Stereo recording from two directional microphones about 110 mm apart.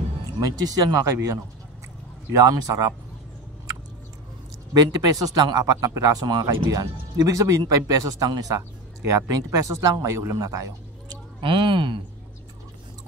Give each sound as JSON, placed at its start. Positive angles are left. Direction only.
{"t": 0.4, "sound": "speech", "side_deg": -35}
{"t": 4.7, "sound": "speech", "side_deg": -35}
{"t": 10.3, "sound": "a sound", "side_deg": -30}
{"t": 11.4, "sound": "speech", "side_deg": -50}